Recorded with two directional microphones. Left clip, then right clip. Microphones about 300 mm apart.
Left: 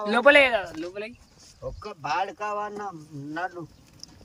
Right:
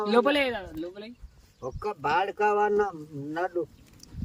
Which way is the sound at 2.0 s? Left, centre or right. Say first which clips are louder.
Right 2 dB; right.